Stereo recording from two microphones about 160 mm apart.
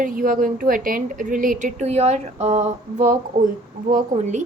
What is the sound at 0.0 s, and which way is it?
A woman's voice, 60° right (ahead or behind).